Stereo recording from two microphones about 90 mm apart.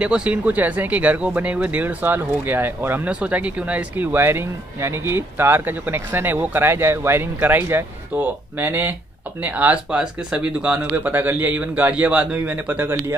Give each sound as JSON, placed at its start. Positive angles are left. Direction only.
{"t": 0.0, "sound": "speech", "side_deg": -15}